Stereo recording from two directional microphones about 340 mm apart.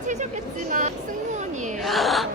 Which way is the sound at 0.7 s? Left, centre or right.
Right.